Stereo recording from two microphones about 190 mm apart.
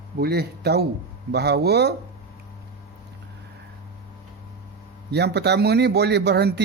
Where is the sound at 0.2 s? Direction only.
55° right (ahead or behind).